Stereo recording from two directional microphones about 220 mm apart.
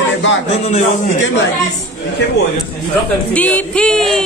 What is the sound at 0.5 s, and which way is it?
Speech, 30° left (ahead or behind).